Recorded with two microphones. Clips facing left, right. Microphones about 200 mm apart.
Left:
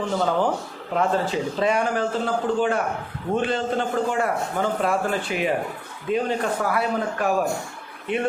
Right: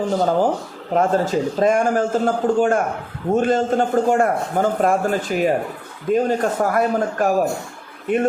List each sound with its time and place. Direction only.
0.1 s a man's voice: 40° right (ahead or behind)